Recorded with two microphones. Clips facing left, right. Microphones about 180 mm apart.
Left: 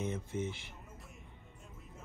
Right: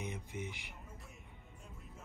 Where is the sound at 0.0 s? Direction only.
15° right (ahead or behind).